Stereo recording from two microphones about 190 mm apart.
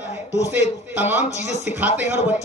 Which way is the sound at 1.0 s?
10° right (ahead or behind).